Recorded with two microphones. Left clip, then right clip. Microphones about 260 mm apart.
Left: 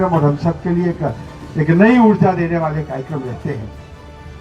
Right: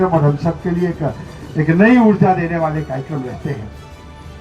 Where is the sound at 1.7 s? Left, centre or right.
Right.